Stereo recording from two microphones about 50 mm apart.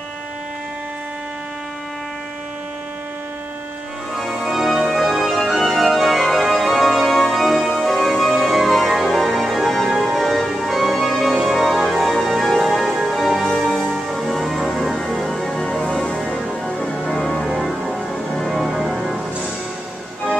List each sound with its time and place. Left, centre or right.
4.1 s organ: centre
10.0 s music: centre
16.7 s music: centre
17.1 s music: centre
17.6 s music: centre
18.1 s music: centre
18.5 s music: centre